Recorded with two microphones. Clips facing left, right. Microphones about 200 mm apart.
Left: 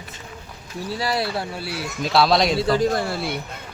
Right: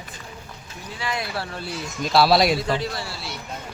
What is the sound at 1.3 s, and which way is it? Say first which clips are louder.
Speech: left 2 dB; 15° left (ahead or behind).